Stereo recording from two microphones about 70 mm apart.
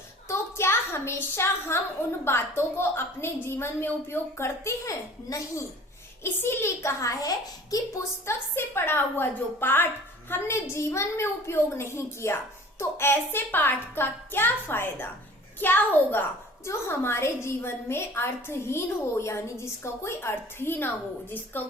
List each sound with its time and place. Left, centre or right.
0.3 s a sound: left
2.2 s a woman's voice: left
6.2 s a child's voice: left
8.3 s a woman's voice: left